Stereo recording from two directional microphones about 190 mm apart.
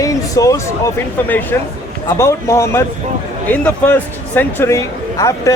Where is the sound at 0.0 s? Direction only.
15° left (ahead or behind).